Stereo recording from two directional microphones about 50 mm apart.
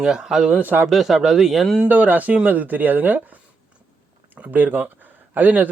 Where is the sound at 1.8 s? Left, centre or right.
Right.